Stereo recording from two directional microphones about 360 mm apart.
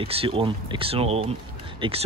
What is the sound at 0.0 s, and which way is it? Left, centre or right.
Speech, centre.